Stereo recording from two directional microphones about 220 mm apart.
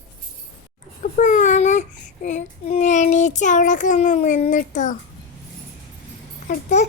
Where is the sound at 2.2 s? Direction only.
30° left (ahead or behind).